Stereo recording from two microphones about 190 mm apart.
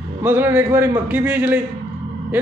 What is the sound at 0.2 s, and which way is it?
Speech, 10° right (ahead or behind).